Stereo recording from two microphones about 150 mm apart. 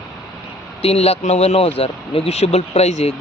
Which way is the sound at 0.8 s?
40° left (ahead or behind).